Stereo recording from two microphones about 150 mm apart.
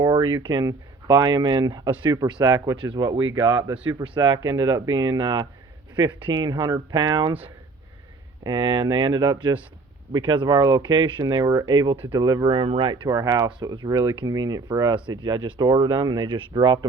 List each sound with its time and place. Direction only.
0.0 s speech: 25° right (ahead or behind)
8.4 s speech: 30° right (ahead or behind)